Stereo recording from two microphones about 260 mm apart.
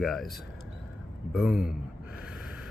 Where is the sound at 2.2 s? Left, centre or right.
Centre.